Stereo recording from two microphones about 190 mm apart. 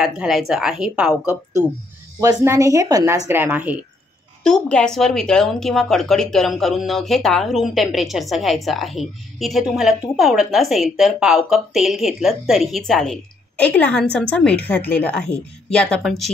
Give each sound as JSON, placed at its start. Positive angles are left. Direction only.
{"t": 0.0, "sound": "a woman's voice", "side_deg": 0}
{"t": 2.1, "sound": "a woman's voice", "side_deg": -15}
{"t": 4.4, "sound": "a woman's voice", "side_deg": 5}